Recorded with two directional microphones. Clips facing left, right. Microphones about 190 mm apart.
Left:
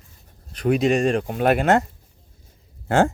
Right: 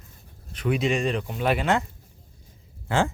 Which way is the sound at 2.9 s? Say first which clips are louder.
Left 6 dB; 50° left (ahead or behind).